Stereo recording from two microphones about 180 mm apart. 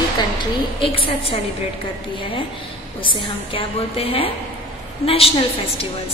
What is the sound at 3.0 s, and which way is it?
A woman's voice, 30° left (ahead or behind).